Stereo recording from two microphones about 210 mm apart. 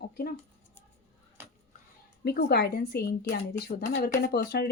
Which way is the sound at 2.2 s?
50° left (ahead or behind).